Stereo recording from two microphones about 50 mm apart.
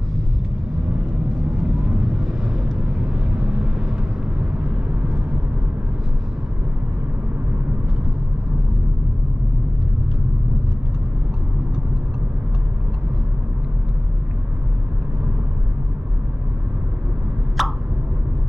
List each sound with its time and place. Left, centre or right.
1.8 s vehicle: centre
17.6 s plop: centre